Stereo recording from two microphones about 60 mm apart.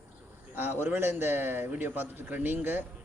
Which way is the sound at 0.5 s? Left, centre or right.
Right.